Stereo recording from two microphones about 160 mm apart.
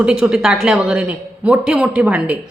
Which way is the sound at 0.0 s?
5° right (ahead or behind).